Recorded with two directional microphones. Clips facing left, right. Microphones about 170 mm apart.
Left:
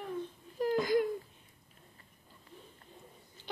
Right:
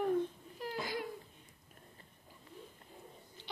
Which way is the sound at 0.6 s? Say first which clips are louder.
Left 11 dB; 45° left (ahead or behind).